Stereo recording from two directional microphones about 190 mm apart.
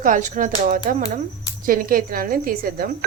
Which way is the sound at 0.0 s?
40° right (ahead or behind).